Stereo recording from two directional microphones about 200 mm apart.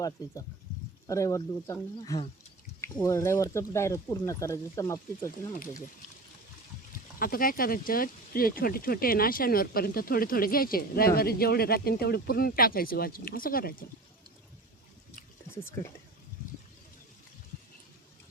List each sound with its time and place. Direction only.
0.2 s speech: 20° left (ahead or behind)
7.2 s speech: 45° left (ahead or behind)